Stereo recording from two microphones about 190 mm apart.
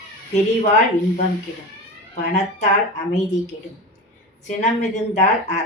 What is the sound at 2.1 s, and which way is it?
Speech, 35° left (ahead or behind).